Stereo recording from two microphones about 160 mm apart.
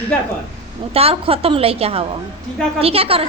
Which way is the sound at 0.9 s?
35° right (ahead or behind).